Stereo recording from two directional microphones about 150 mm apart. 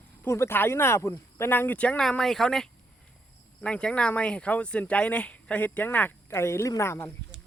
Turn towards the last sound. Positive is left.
turn(degrees=20)  # may be behind; listen again after turning